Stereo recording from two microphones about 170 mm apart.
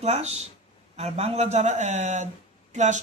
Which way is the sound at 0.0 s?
40° right (ahead or behind).